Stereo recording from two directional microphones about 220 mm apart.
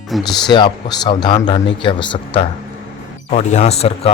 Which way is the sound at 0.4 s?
20° left (ahead or behind).